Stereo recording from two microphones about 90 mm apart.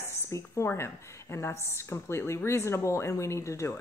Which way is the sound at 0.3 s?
30° left (ahead or behind).